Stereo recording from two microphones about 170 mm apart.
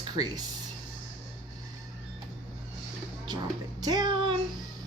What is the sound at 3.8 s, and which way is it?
Child singing, 25° right (ahead or behind).